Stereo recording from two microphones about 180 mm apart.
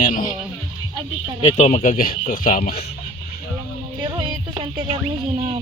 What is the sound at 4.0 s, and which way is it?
Music, 25° right (ahead or behind).